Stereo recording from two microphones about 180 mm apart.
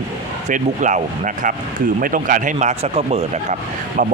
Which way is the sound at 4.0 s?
50° right (ahead or behind).